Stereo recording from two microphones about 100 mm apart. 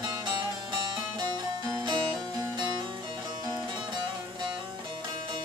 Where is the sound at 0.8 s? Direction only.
45° right (ahead or behind).